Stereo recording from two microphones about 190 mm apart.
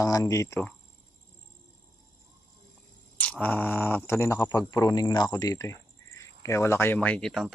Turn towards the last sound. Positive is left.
turn(degrees=0)  # may be behind; listen again after turning